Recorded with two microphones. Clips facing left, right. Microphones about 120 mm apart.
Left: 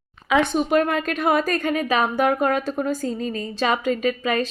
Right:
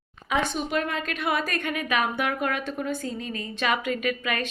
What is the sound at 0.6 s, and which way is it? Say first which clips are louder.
A woman's voice: left 8 dB; 50° left (ahead or behind).